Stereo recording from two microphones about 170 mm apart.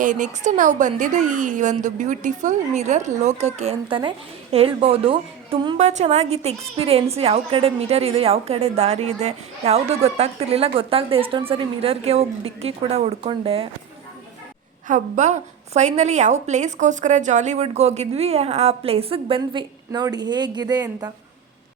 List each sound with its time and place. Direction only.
0.0 s a woman's voice: 50° right (ahead or behind)
14.8 s a woman's voice: 50° right (ahead or behind); by 21.1 s 25° right (ahead or behind)